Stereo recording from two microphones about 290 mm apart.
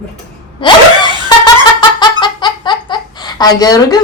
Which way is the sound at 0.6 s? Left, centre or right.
Centre.